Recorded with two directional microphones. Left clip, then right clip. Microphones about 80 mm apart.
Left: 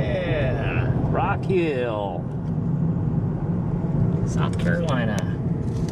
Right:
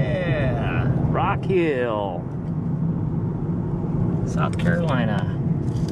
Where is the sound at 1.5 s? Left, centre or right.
Centre.